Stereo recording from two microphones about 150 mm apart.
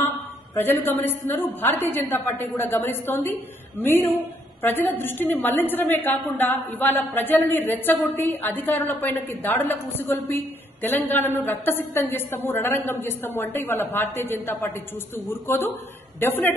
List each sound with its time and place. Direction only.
0.6 s a woman's voice: 15° left (ahead or behind)